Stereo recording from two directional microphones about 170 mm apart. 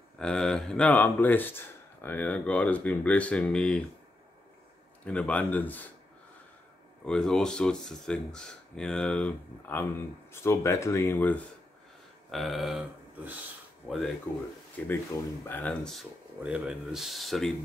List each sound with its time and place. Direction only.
0.2 s speech: 5° left (ahead or behind)
5.0 s speech: 5° left (ahead or behind)
7.1 s speech: 5° left (ahead or behind)
12.3 s a sound: centre (ahead or behind)
13.8 s speech: centre (ahead or behind)